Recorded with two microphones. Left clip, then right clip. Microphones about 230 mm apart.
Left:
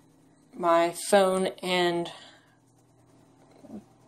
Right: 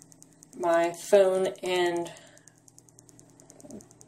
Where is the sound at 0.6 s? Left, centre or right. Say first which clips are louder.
Left 2 dB; left.